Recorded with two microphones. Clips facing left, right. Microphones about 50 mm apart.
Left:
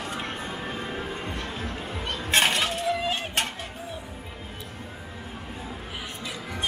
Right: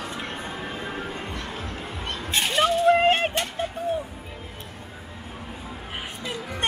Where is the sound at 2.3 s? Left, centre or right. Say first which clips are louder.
Left 4 dB; left.